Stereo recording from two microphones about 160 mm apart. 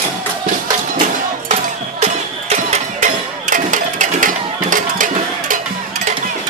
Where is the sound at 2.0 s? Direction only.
45° right (ahead or behind).